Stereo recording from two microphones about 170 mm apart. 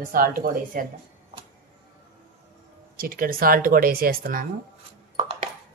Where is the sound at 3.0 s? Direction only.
55° right (ahead or behind).